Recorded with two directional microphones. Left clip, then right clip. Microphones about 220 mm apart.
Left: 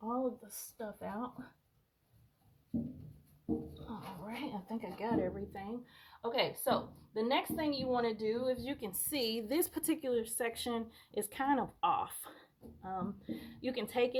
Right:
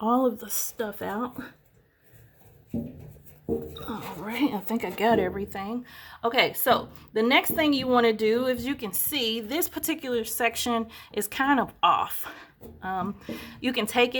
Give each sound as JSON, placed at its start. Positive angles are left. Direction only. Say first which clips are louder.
{"t": 0.1, "sound": "speech", "louder": "right 12 dB", "side_deg": -55}
{"t": 3.8, "sound": "speech", "louder": "right 11 dB", "side_deg": -45}
{"t": 5.1, "sound": "speech", "louder": "right 11 dB", "side_deg": -25}
{"t": 8.8, "sound": "a woman's voice", "louder": "right 9 dB", "side_deg": 0}